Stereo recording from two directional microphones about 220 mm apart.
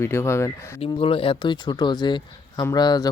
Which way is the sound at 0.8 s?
25° left (ahead or behind).